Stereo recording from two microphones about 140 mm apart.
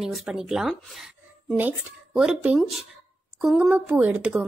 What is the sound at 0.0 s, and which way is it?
A woman's voice, 5° right (ahead or behind).